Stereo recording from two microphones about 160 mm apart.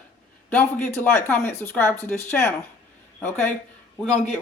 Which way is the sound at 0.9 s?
10° left (ahead or behind).